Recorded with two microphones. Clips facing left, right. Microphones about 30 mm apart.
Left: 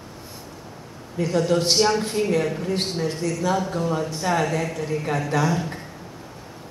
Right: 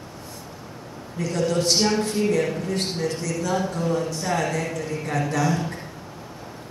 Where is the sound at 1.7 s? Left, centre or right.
Centre.